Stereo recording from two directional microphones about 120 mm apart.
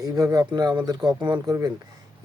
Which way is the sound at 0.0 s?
30° right (ahead or behind).